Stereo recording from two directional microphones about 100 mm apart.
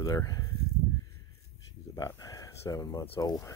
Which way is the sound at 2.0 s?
35° left (ahead or behind).